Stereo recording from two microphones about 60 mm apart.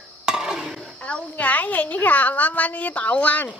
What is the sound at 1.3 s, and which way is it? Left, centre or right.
A woman's voice, left.